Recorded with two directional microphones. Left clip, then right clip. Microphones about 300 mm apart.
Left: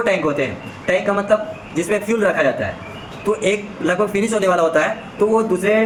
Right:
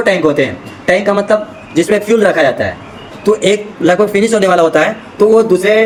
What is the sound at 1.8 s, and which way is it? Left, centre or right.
Speech, centre.